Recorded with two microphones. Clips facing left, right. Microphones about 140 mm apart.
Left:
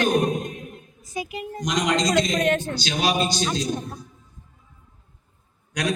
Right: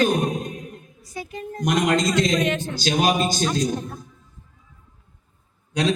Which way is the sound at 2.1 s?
55° left (ahead or behind).